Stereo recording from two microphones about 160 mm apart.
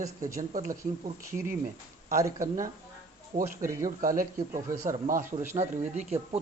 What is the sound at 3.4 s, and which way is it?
Speech, 20° right (ahead or behind).